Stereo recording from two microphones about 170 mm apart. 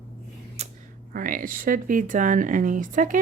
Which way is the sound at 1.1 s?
55° right (ahead or behind).